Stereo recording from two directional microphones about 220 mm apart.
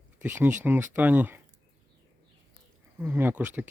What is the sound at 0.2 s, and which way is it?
Speech, 5° right (ahead or behind).